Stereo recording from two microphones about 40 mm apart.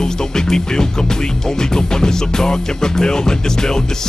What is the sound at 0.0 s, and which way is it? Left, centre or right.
Music, centre.